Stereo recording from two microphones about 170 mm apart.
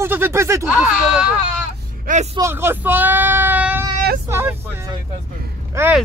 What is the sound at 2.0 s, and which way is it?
Speech, 45° right (ahead or behind).